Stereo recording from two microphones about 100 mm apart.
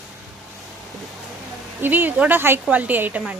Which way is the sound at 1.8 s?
20° right (ahead or behind).